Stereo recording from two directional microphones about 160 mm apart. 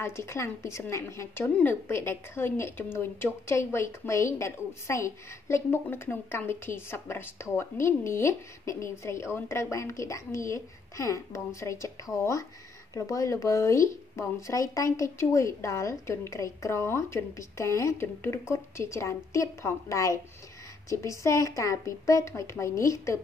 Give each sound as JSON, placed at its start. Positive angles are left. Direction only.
{"t": 0.0, "sound": "a woman's voice", "side_deg": 15}